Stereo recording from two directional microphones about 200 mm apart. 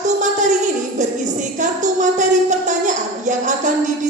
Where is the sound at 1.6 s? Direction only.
40° right (ahead or behind).